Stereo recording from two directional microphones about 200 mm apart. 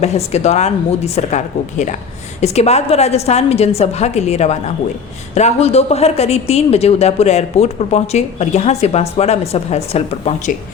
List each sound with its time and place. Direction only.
0.0 s a woman's voice: 35° left (ahead or behind)
2.4 s a woman's voice: 35° left (ahead or behind)